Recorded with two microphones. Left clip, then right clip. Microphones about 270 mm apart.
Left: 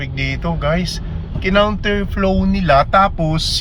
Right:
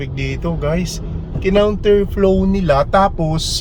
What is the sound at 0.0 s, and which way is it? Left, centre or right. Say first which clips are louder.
Speech: left 2 dB; centre.